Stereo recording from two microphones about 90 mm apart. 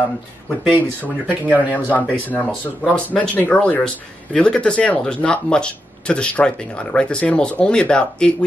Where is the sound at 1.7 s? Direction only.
20° left (ahead or behind).